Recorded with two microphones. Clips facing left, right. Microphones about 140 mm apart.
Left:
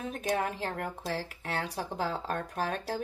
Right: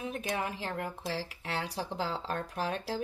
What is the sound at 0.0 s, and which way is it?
Speech, 40° left (ahead or behind).